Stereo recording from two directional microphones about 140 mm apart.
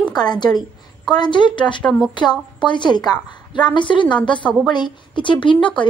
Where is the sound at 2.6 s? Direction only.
35° left (ahead or behind).